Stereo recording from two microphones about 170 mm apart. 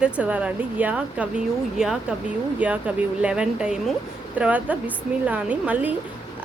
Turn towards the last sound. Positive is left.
turn(degrees=-10)  # may be behind; listen again after turning